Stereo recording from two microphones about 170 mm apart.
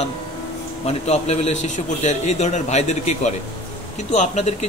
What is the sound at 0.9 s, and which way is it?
A man's voice, 40° left (ahead or behind).